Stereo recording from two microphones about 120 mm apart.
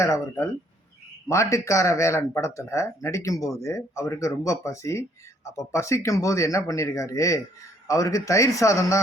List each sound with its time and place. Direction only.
0.0 s speech: 25° left (ahead or behind)